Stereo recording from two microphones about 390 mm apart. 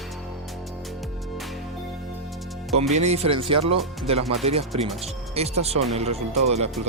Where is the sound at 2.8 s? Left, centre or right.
Centre.